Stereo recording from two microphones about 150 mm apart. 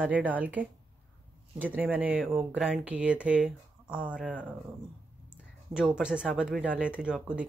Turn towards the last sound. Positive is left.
turn(degrees=-5)  # may be behind; listen again after turning